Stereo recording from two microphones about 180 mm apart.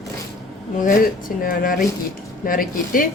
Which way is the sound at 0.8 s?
50° left (ahead or behind).